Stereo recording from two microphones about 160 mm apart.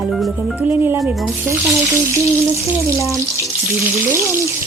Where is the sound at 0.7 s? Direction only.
15° right (ahead or behind).